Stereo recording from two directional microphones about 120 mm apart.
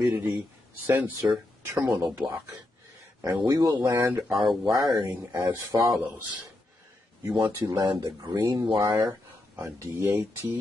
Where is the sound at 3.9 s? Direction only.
15° right (ahead or behind).